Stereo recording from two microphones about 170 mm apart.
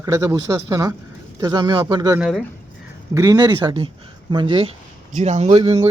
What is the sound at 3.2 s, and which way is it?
Speech, 20° right (ahead or behind).